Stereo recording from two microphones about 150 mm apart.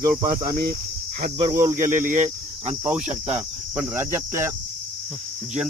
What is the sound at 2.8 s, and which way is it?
Cricket, 10° right (ahead or behind).